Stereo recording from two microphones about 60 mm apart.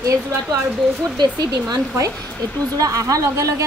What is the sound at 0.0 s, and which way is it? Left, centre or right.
Speech, right.